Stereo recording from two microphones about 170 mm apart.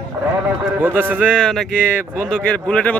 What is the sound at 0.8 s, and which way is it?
Speech, 10° right (ahead or behind).